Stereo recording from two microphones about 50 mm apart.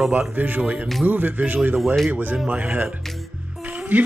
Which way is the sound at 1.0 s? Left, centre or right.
Right.